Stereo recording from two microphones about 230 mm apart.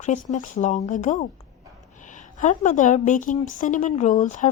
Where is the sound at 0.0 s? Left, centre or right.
Left.